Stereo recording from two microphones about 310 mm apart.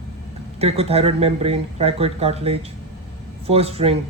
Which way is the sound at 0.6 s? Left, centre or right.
Centre.